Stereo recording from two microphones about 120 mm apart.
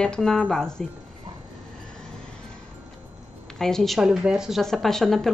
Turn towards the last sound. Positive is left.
turn(degrees=0)  # may be behind; listen again after turning